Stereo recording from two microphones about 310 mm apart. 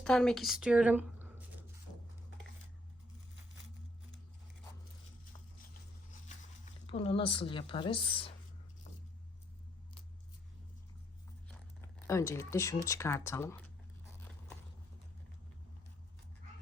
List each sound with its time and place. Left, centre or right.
0.0 s a woman's voice: centre
6.8 s a woman's voice: centre
11.4 s speech: centre